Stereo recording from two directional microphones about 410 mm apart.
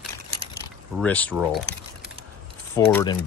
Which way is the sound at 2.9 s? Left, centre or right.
Centre.